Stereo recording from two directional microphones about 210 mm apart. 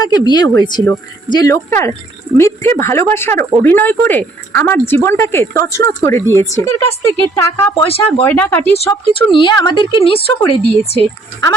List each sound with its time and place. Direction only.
0.0 s a woman's voice: 20° left (ahead or behind)
9.1 s speech: 25° left (ahead or behind)